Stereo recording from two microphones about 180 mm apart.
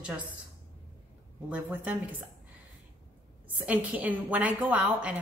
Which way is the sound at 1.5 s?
10° right (ahead or behind).